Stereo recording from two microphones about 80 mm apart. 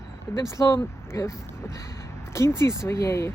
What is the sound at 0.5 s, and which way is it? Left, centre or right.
Speech, left.